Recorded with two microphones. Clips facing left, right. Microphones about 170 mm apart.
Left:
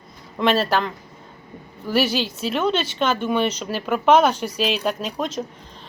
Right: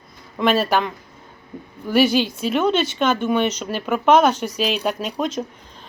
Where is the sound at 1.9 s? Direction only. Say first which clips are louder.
Right 4 dB; 5° left (ahead or behind).